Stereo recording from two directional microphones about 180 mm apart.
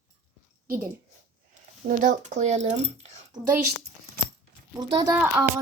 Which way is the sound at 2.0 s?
40° right (ahead or behind).